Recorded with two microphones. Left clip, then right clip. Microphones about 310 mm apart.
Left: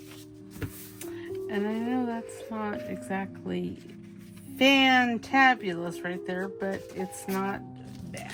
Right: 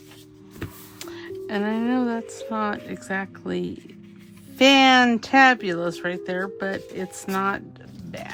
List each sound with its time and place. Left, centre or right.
0.9 s speech: centre